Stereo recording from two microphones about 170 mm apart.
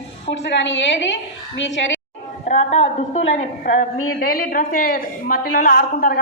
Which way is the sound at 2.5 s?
40° left (ahead or behind).